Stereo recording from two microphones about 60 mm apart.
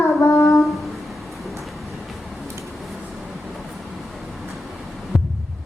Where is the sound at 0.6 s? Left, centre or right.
Centre.